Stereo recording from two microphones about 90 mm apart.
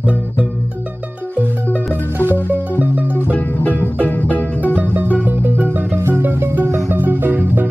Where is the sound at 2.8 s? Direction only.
20° right (ahead or behind).